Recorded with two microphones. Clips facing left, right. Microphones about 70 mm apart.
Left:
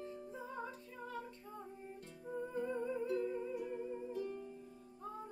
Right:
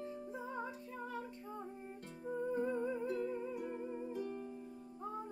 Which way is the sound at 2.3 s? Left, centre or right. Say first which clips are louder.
Right 3 dB; centre.